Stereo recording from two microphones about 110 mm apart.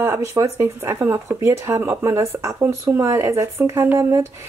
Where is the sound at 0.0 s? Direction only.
25° right (ahead or behind).